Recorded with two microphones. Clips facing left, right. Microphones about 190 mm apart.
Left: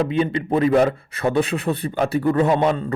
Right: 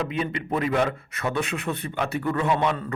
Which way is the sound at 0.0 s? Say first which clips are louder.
Left 7 dB; 30° left (ahead or behind).